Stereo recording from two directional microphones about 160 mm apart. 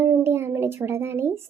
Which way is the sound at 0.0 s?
15° right (ahead or behind).